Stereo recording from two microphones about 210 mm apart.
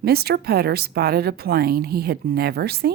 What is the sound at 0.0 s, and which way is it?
Speech, 50° right (ahead or behind).